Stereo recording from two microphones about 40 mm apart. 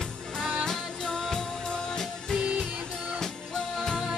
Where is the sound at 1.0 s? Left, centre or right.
Left.